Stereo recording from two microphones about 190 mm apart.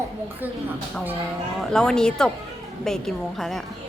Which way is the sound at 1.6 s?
5° left (ahead or behind).